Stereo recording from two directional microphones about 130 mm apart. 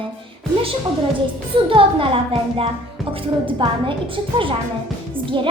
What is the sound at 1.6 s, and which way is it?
Speech, 45° right (ahead or behind).